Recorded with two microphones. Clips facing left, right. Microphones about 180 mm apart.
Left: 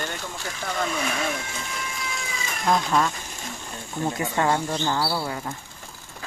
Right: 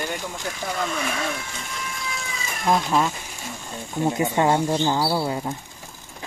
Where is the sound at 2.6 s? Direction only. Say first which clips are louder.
Right 1 dB; 5° right (ahead or behind).